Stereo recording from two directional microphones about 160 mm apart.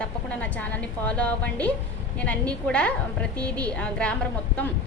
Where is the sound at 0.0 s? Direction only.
10° left (ahead or behind).